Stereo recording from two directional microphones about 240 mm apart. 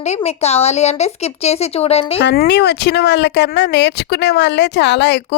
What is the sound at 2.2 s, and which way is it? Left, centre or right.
Speech, left.